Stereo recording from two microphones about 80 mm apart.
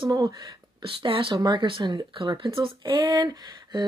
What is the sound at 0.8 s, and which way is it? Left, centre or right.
Speech, right.